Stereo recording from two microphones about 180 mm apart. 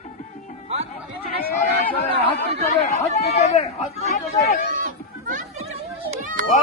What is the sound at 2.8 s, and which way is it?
Chatter, 40° left (ahead or behind).